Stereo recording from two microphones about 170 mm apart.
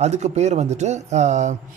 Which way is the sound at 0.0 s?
40° right (ahead or behind).